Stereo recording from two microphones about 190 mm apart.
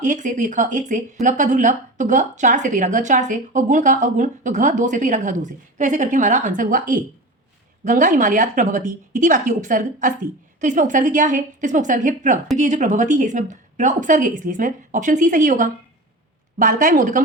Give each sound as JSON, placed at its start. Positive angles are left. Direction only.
{"t": 0.0, "sound": "a woman's voice", "side_deg": -40}